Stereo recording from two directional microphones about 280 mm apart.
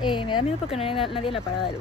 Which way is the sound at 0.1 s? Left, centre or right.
Centre.